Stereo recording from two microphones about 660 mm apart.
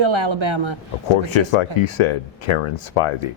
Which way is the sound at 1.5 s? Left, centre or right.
Left.